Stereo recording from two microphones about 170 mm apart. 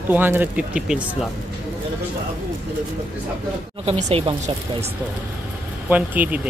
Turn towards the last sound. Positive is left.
turn(degrees=-10)  # may be behind; listen again after turning